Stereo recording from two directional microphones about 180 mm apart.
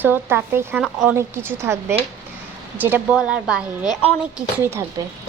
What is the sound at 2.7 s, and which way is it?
A woman's voice, 10° right (ahead or behind).